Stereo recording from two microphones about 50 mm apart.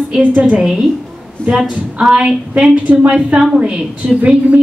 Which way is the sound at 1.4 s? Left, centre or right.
Left.